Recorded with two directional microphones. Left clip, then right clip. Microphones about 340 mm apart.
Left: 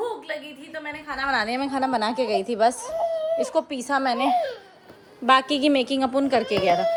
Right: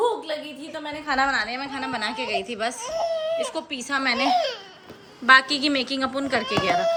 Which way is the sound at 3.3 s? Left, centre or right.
Centre.